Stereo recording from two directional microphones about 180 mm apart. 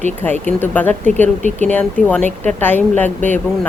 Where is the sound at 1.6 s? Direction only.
10° left (ahead or behind).